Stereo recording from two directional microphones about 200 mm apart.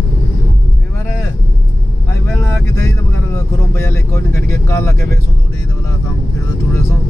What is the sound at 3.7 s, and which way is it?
Vehicle, 10° left (ahead or behind).